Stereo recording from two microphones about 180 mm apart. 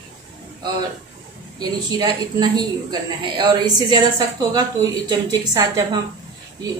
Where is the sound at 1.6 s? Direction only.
20° right (ahead or behind).